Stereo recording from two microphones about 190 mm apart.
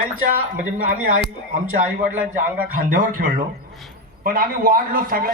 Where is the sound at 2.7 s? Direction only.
45° right (ahead or behind).